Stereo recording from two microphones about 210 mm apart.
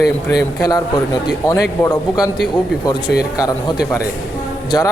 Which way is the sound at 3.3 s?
15° left (ahead or behind).